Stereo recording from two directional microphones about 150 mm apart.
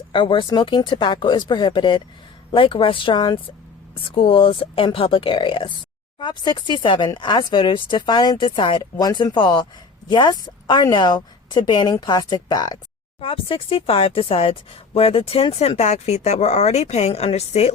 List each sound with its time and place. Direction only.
0.1 s a woman's voice: 35° left (ahead or behind)
13.2 s speech: 35° left (ahead or behind)